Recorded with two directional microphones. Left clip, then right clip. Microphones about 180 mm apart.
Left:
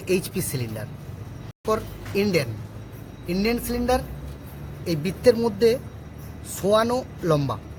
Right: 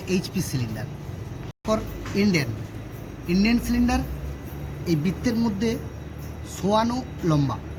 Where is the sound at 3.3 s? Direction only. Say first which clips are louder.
Right 1 dB; 75° left (ahead or behind).